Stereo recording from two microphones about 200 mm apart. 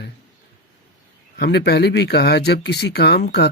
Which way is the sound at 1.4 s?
55° left (ahead or behind).